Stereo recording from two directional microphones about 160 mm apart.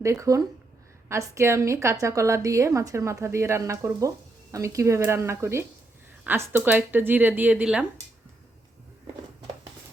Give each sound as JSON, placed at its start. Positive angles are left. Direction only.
{"t": 0.0, "sound": "a woman's voice", "side_deg": -20}